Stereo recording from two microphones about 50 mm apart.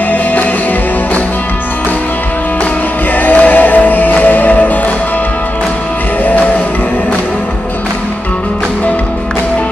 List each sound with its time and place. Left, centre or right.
0.1 s music: left
3.2 s music: left